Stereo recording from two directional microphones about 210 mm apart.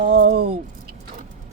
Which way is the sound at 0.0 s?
40° right (ahead or behind).